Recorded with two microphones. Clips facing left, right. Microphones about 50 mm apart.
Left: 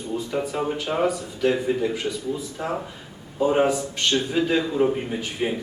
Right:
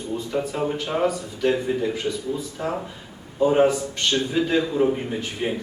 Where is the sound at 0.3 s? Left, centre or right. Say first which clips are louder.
Right 2 dB; centre.